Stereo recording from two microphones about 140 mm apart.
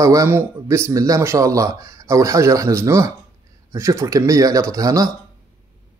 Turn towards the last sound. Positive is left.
turn(degrees=-25)  # may be behind; listen again after turning